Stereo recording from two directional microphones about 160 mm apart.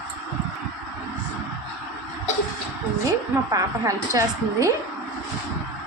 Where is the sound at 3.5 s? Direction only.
20° right (ahead or behind).